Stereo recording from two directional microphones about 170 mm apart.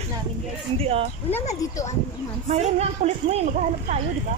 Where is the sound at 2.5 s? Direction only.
40° right (ahead or behind).